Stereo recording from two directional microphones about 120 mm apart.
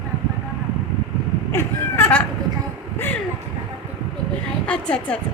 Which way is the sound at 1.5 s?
20° left (ahead or behind).